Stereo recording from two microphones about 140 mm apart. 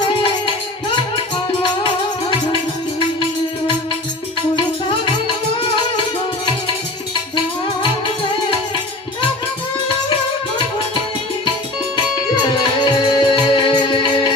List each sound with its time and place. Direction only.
12.4 s music: 35° left (ahead or behind)